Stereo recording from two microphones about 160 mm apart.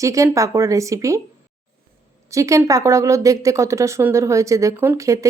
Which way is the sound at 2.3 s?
20° right (ahead or behind).